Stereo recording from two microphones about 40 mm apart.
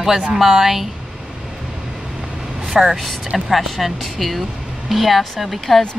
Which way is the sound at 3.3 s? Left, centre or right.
Centre.